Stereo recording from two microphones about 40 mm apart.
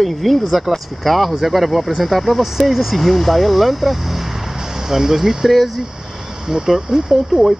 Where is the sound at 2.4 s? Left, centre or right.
Centre.